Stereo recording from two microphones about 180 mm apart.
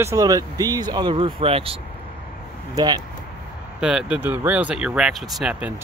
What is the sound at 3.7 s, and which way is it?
Speech, 5° right (ahead or behind).